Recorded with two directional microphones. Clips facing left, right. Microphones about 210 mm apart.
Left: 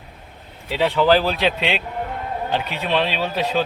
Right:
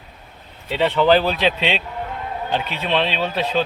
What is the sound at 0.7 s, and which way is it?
A man's voice, 5° left (ahead or behind).